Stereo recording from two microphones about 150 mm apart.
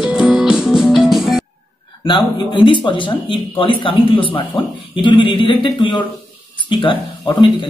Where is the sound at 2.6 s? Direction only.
35° left (ahead or behind).